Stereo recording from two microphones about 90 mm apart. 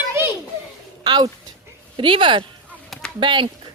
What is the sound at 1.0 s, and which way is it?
Speech, 55° right (ahead or behind).